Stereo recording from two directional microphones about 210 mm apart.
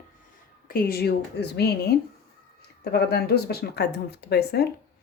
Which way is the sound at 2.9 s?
50° left (ahead or behind).